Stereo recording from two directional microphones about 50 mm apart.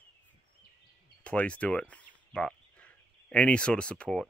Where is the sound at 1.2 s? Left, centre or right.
Left.